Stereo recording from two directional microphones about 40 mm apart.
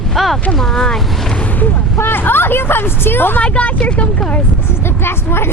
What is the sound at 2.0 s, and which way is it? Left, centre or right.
Speech, left.